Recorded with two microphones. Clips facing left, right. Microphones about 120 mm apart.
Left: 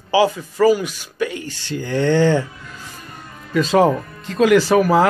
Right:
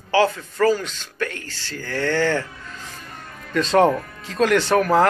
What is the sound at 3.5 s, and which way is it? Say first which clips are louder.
Speech: left 2 dB; 5° left (ahead or behind).